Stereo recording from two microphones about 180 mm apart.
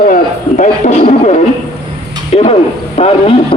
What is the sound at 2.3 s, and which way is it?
Speech, 35° left (ahead or behind).